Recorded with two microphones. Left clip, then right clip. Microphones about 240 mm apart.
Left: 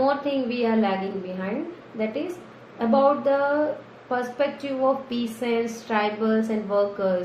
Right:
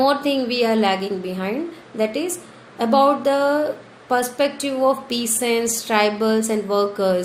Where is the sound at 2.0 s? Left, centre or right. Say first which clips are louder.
Right 6 dB; right.